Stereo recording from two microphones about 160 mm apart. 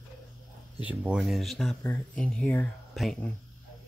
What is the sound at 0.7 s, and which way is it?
Speech, 10° right (ahead or behind).